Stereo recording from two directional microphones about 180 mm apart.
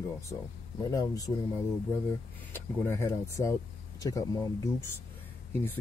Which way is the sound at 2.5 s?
15° left (ahead or behind).